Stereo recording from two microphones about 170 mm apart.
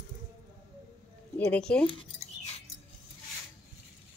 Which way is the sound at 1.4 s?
5° left (ahead or behind).